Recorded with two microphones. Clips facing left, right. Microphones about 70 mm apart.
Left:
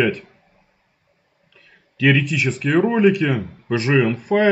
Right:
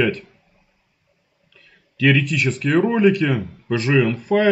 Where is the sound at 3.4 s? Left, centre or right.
Left.